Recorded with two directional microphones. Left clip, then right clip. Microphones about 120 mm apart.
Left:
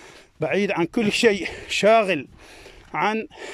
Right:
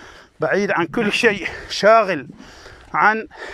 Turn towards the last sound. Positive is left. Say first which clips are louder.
# right 7 dB
turn(degrees=30)  # may be behind; listen again after turning